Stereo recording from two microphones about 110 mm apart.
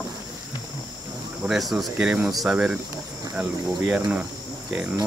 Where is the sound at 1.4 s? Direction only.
5° right (ahead or behind).